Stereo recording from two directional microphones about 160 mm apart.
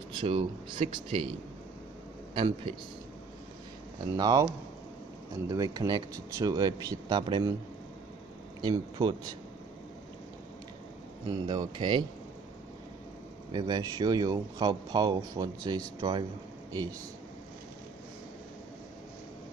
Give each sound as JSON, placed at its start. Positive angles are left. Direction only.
{"t": 0.2, "sound": "speech", "side_deg": -35}
{"t": 2.3, "sound": "speech", "side_deg": -30}
{"t": 4.2, "sound": "speech", "side_deg": -25}
{"t": 5.5, "sound": "speech", "side_deg": -25}
{"t": 8.5, "sound": "speech", "side_deg": -25}
{"t": 11.2, "sound": "speech", "side_deg": -25}
{"t": 13.5, "sound": "speech", "side_deg": -25}